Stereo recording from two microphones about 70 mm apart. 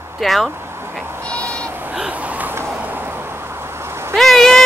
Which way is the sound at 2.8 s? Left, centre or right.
Right.